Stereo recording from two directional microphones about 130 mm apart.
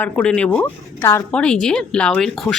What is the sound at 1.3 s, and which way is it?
Speech, 5° left (ahead or behind).